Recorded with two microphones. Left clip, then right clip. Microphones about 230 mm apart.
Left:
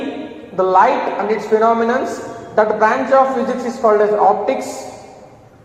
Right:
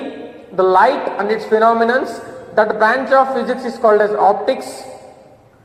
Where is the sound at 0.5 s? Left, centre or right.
Right.